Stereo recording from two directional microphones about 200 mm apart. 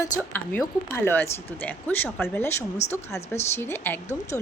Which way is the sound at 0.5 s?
10° left (ahead or behind).